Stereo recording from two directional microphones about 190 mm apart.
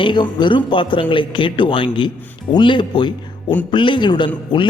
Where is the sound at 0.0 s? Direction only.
25° left (ahead or behind).